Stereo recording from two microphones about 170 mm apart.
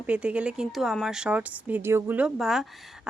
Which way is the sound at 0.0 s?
10° right (ahead or behind).